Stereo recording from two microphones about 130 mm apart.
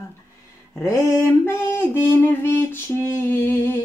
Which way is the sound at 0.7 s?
20° left (ahead or behind).